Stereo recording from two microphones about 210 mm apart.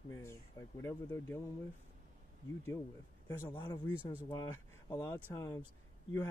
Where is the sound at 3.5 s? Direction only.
20° left (ahead or behind).